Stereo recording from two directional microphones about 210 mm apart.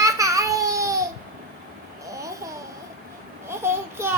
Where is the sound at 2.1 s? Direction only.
15° right (ahead or behind).